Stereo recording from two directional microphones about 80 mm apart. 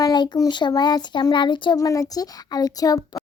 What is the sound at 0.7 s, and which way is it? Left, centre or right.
Speech, left.